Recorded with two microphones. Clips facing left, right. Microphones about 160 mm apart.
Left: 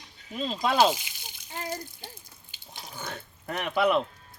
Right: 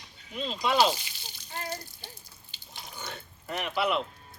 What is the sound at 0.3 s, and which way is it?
Speech, 40° left (ahead or behind).